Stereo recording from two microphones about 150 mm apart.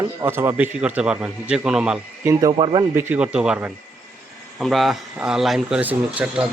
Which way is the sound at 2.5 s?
35° right (ahead or behind).